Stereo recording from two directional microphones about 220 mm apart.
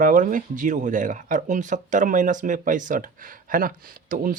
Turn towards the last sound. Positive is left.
turn(degrees=-40)  # may be behind; listen again after turning